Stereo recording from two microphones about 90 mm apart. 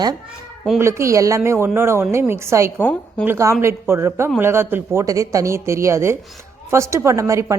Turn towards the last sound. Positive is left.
turn(degrees=-35)  # may be behind; listen again after turning